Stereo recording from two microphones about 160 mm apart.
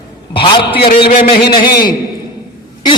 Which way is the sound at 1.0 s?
75° left (ahead or behind).